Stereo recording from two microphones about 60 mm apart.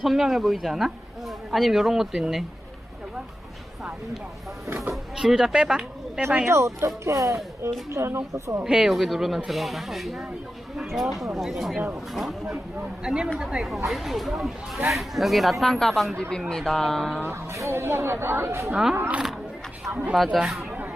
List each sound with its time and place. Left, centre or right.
0.0 s speech: centre
5.1 s speech: centre
6.5 s speech: right
8.6 s speech: centre
13.1 s speech: centre
17.5 s speech: right
18.7 s speech: centre
18.9 s speech: right
20.1 s speech: centre